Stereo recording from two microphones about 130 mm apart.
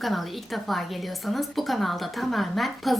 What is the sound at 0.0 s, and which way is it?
A woman's voice, centre (ahead or behind).